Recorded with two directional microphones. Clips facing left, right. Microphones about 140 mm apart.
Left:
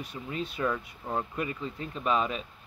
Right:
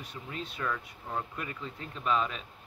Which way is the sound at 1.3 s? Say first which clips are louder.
Left 6 dB; 10° left (ahead or behind).